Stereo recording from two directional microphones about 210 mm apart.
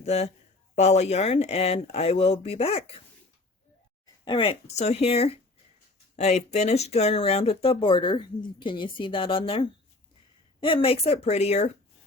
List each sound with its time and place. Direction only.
0.0 s speech: 30° left (ahead or behind)
4.0 s speech: 25° left (ahead or behind)